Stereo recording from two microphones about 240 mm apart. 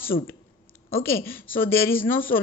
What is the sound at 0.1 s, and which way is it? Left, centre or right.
Speech, left.